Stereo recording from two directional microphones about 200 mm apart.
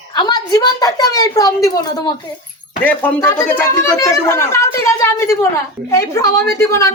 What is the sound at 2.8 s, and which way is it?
Speech, 10° left (ahead or behind).